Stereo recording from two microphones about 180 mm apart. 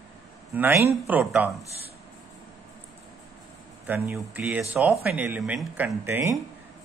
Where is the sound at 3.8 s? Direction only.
10° right (ahead or behind).